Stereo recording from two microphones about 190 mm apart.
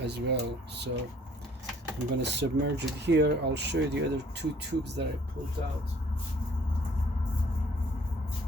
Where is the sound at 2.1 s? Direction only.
65° right (ahead or behind).